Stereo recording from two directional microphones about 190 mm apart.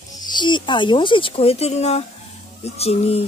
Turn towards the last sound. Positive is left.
turn(degrees=30)  # may be behind; listen again after turning